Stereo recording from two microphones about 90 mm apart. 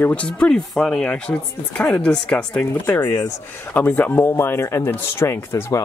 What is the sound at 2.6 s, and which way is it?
Speech, 30° left (ahead or behind).